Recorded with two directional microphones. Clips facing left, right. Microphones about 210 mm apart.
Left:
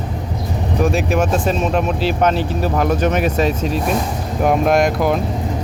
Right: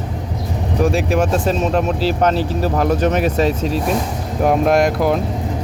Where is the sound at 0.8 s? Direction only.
35° right (ahead or behind).